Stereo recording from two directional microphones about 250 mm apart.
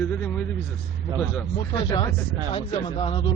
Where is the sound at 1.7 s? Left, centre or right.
Centre.